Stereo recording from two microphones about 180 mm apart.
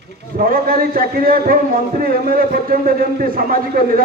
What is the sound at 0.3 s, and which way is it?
A man's voice, 55° right (ahead or behind).